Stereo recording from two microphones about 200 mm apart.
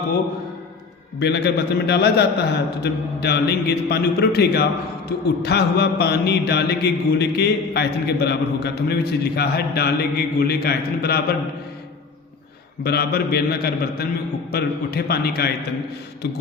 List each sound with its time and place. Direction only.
1.2 s a man's voice: 55° left (ahead or behind)
12.8 s a man's voice: 50° left (ahead or behind)